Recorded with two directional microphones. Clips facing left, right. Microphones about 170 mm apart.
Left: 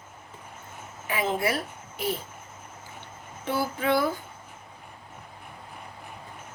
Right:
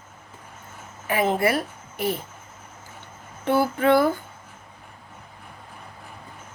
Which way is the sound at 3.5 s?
55° right (ahead or behind).